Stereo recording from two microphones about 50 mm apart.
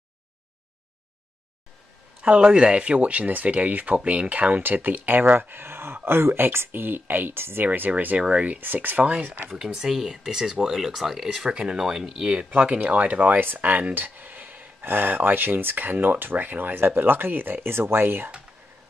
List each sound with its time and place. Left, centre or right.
2.2 s speech: right
8.2 s speech: right
8.5 s speech: right
9.5 s speech: centre
12.4 s speech: right
13.5 s a sound: right
14.9 s speech: right